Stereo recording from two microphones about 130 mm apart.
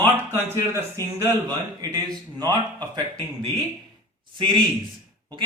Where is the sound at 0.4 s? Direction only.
20° right (ahead or behind).